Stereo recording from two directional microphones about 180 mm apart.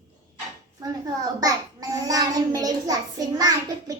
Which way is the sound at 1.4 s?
20° right (ahead or behind).